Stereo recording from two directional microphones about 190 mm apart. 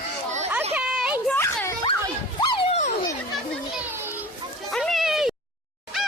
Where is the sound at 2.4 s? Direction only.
25° left (ahead or behind).